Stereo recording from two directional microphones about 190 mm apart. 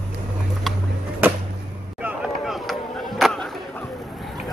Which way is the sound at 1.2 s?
10° right (ahead or behind).